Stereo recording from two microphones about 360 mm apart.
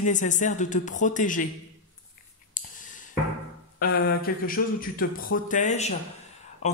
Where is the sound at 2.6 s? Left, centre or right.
Left.